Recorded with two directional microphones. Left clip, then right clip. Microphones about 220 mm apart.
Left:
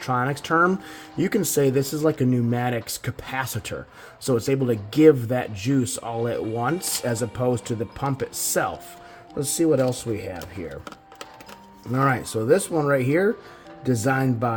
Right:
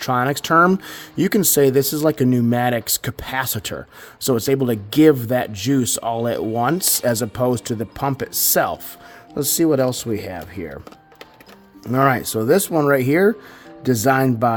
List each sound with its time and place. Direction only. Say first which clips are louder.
0.0 s speech: right 5 dB; 35° right (ahead or behind)
11.9 s speech: right 6 dB; 35° right (ahead or behind)